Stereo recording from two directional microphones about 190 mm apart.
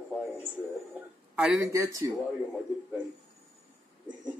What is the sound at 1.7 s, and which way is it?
Speech, 15° right (ahead or behind).